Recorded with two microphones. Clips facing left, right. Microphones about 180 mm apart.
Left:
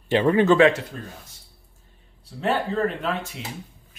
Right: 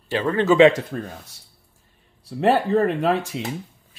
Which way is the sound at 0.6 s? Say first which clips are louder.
Right 3 dB; 20° right (ahead or behind).